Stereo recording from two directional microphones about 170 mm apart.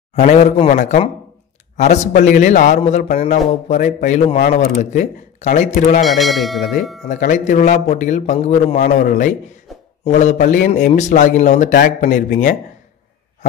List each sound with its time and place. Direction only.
0.1 s a man's voice: 45° left (ahead or behind)
6.0 s speech: centre (ahead or behind)
7.1 s a man's voice: 45° left (ahead or behind)
9.7 s a sound: centre (ahead or behind)
10.0 s a man's voice: 45° left (ahead or behind)